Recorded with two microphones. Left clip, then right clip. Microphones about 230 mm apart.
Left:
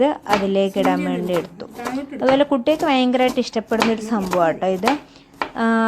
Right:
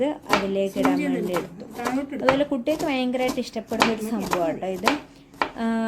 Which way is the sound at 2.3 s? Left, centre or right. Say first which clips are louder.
Left 7 dB; centre.